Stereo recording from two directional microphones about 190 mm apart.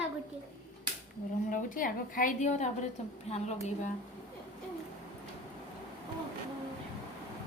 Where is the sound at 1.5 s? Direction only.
45° left (ahead or behind).